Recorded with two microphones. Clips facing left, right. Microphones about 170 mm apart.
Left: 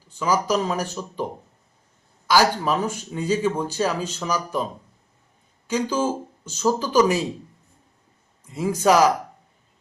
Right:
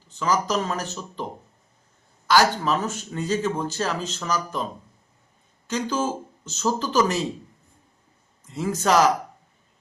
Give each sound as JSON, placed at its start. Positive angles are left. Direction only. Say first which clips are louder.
{"t": 0.1, "sound": "speech", "louder": "left 2 dB", "side_deg": 10}
{"t": 5.6, "sound": "speech", "louder": "left 3 dB", "side_deg": 10}
{"t": 8.4, "sound": "speech", "louder": "left 3 dB", "side_deg": 10}